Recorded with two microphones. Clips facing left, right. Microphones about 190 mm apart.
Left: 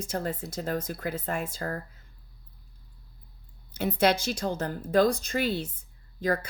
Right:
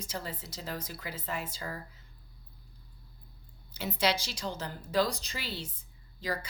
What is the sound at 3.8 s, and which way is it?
A woman's voice, 55° left (ahead or behind).